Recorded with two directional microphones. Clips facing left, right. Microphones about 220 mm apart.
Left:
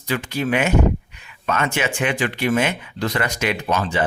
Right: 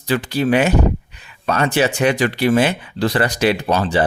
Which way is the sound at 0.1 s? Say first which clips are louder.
Right 5 dB; 35° right (ahead or behind).